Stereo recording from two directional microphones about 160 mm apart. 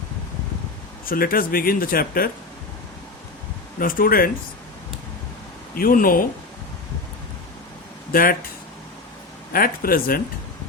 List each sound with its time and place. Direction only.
1.0 s speech: 65° left (ahead or behind)
3.8 s speech: 60° left (ahead or behind)
5.7 s speech: 60° left (ahead or behind)
8.1 s speech: 65° left (ahead or behind)
9.5 s speech: 65° left (ahead or behind)